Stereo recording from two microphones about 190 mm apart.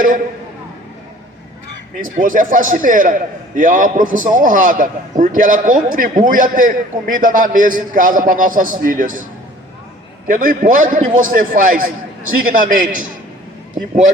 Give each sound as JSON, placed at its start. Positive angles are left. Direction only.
{"t": 2.1, "sound": "a man's voice", "side_deg": -45}
{"t": 10.2, "sound": "a man's voice", "side_deg": -45}